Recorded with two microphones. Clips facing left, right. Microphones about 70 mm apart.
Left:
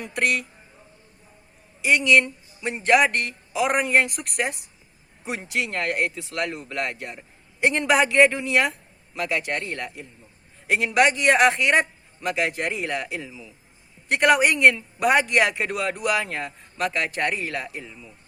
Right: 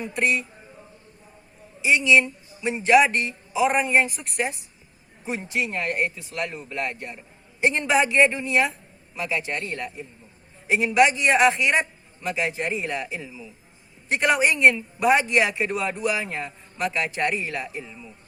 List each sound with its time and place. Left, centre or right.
0.0 s speech: left
1.8 s speech: left
5.2 s speech: left
7.6 s a woman's voice: left
10.7 s speech: left